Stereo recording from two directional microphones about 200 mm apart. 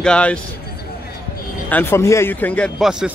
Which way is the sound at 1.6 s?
10° left (ahead or behind).